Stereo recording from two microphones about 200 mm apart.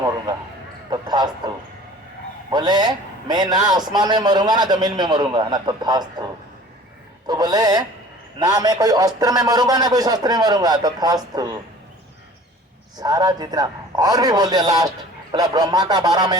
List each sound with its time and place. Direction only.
0.9 s a sound: 20° right (ahead or behind)
2.5 s a man's voice: 20° right (ahead or behind)
7.3 s a man's voice: 20° right (ahead or behind)
13.0 s a man's voice: 20° right (ahead or behind)